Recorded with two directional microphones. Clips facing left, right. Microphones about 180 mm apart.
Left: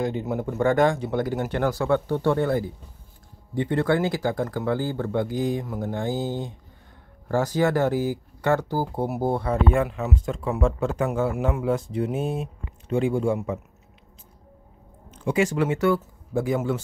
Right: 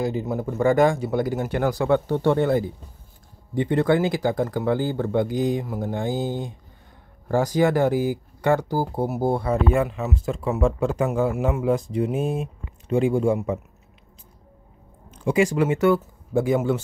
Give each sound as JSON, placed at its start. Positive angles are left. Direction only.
{"t": 0.0, "sound": "speech", "side_deg": 0}
{"t": 15.2, "sound": "speech", "side_deg": -15}